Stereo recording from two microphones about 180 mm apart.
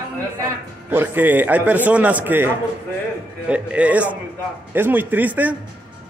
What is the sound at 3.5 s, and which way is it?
Speech, 5° right (ahead or behind).